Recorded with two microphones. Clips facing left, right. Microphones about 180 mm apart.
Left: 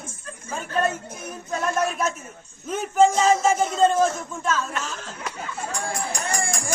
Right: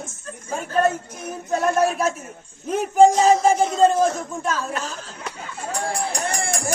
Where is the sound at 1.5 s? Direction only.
35° right (ahead or behind).